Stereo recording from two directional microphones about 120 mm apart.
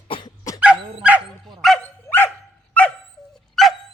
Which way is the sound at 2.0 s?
15° left (ahead or behind).